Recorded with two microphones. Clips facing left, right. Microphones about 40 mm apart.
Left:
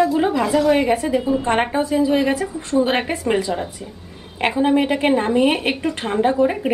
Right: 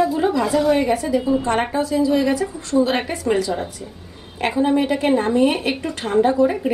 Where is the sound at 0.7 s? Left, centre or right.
Left.